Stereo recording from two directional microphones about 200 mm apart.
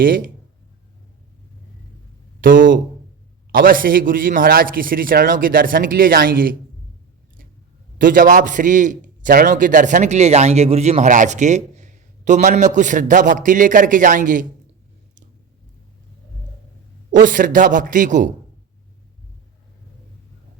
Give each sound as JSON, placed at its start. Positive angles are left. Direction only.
{"t": 0.0, "sound": "a man's voice", "side_deg": -45}
{"t": 2.4, "sound": "a man's voice", "side_deg": -45}
{"t": 7.9, "sound": "a man's voice", "side_deg": -45}
{"t": 17.1, "sound": "a man's voice", "side_deg": -40}